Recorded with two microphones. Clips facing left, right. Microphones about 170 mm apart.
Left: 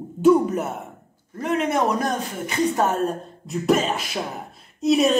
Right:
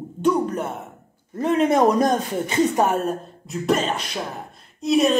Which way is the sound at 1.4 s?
30° right (ahead or behind).